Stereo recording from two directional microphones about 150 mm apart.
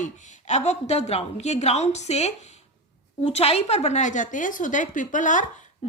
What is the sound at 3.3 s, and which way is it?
A woman's voice, 45° left (ahead or behind).